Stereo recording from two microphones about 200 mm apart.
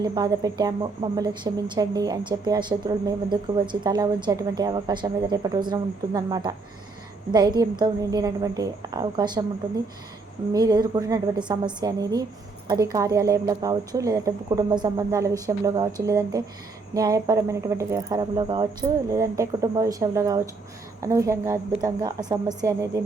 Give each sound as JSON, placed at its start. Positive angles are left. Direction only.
{"t": 0.0, "sound": "a woman's voice", "side_deg": -20}
{"t": 10.5, "sound": "a woman's voice", "side_deg": -20}